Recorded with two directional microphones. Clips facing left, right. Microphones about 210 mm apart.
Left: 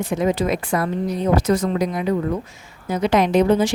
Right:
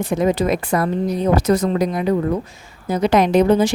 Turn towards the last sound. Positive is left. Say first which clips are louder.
# right 2 dB
turn(degrees=-40)  # may be behind; listen again after turning